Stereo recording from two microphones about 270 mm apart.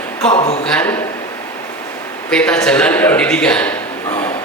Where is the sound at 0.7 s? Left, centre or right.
Centre.